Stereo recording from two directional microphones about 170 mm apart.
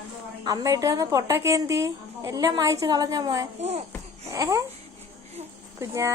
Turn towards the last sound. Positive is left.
turn(degrees=-15)  # may be behind; listen again after turning